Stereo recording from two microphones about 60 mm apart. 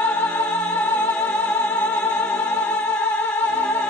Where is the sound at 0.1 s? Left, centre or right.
Left.